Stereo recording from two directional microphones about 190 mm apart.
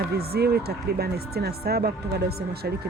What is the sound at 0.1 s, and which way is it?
Speech, 55° right (ahead or behind).